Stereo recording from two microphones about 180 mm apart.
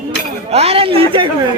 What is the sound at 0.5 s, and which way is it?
Speech, 35° right (ahead or behind).